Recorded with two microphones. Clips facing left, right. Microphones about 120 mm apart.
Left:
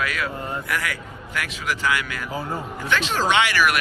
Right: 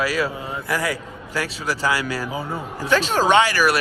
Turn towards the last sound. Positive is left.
turn(degrees=-35)  # may be behind; listen again after turning